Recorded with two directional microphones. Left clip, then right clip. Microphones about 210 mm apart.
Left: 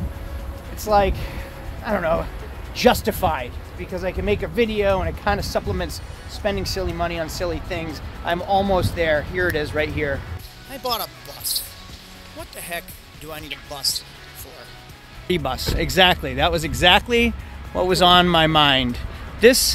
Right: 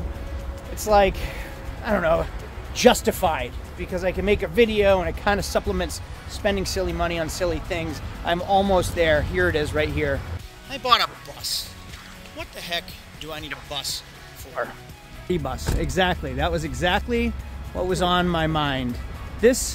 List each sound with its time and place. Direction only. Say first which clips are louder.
0.7 s speech: even; 10° right (ahead or behind); by 18.9 s 15° left (ahead or behind)
19.4 s speech: left 5 dB; 5° left (ahead or behind)